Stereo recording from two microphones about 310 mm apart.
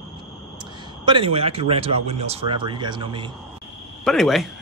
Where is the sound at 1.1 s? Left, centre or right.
Centre.